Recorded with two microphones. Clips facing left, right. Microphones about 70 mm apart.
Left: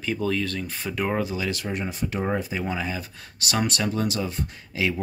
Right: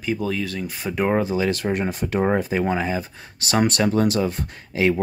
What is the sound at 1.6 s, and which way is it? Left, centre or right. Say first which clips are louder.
Speech: right 5 dB; right.